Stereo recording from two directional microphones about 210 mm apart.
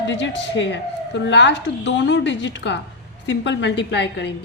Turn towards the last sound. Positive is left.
turn(degrees=55)  # may be behind; listen again after turning